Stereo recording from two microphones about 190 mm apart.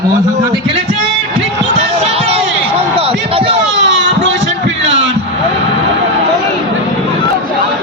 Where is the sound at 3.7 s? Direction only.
70° right (ahead or behind).